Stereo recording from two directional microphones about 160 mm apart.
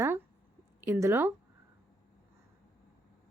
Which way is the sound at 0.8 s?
15° right (ahead or behind).